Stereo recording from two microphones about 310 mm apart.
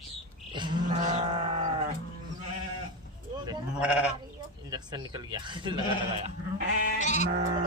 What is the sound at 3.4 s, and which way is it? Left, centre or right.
Sheep, centre.